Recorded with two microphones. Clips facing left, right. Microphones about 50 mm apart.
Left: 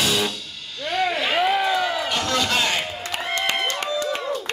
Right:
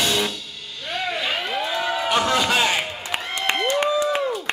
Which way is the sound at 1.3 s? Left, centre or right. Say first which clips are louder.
Left 6 dB; centre.